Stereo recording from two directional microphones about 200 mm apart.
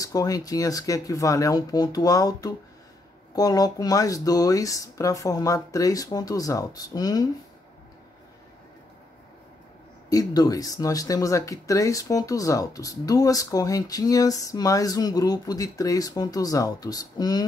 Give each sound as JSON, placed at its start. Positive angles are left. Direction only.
{"t": 0.0, "sound": "speech", "side_deg": 15}
{"t": 10.0, "sound": "speech", "side_deg": 15}